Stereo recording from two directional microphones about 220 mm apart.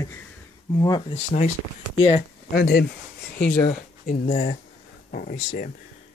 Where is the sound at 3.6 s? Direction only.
35° left (ahead or behind).